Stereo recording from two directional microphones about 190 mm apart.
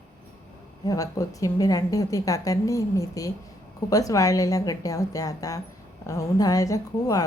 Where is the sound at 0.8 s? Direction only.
20° left (ahead or behind).